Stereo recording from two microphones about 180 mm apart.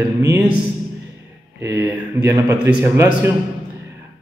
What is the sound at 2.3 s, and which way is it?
A man's voice, 20° right (ahead or behind).